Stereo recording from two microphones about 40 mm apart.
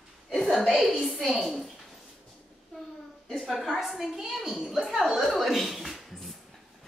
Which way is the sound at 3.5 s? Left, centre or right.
Centre.